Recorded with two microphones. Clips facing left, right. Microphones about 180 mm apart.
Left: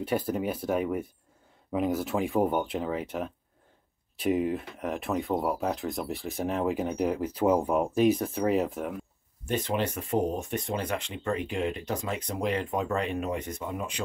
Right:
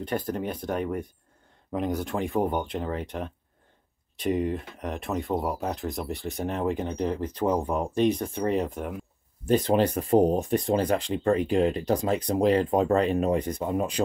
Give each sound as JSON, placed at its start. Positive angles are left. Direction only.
{"t": 0.0, "sound": "speech", "side_deg": 5}
{"t": 9.5, "sound": "speech", "side_deg": -35}